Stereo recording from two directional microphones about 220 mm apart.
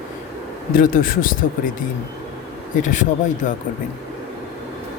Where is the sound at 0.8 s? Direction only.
40° left (ahead or behind).